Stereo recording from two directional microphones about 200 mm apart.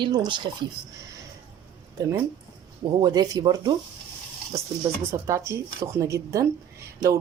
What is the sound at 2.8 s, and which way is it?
Speech, 20° right (ahead or behind).